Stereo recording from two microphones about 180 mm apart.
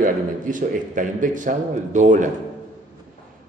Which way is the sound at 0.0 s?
45° right (ahead or behind).